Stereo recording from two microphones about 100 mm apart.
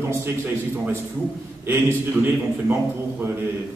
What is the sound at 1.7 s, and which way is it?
Speech, 20° right (ahead or behind).